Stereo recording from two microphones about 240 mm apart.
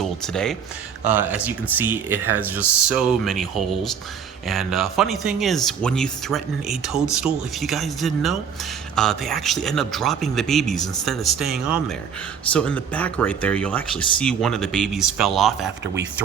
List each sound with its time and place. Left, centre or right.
0.0 s speech: centre